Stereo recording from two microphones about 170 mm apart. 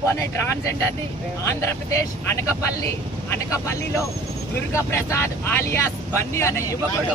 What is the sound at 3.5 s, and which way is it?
Speech, 20° left (ahead or behind).